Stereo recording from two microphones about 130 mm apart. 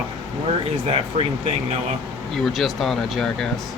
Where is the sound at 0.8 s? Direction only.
50° right (ahead or behind).